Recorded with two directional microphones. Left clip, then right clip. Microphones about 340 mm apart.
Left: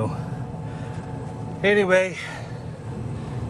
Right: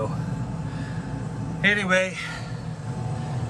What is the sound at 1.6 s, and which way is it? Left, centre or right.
Speech, centre.